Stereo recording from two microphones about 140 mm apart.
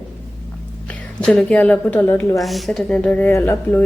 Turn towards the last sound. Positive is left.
turn(degrees=15)  # may be behind; listen again after turning